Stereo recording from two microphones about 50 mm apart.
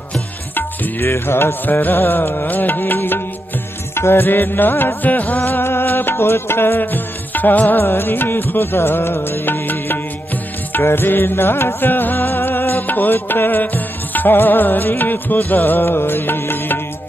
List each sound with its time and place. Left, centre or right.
0.6 s music: left
1.1 s music: left
1.7 s music: left
7.8 s music: left